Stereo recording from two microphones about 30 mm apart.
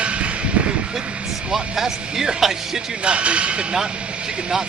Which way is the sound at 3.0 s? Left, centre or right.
Right.